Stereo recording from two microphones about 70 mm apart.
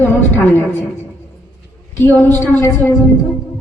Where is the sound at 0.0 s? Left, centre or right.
Left.